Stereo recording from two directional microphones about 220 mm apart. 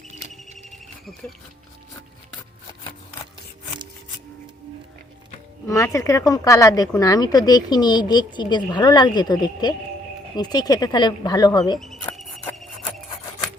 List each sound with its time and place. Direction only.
5.6 s speech: 15° left (ahead or behind)
11.8 s cricket: centre (ahead or behind)